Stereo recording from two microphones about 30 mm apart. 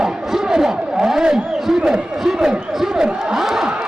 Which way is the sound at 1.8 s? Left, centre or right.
Centre.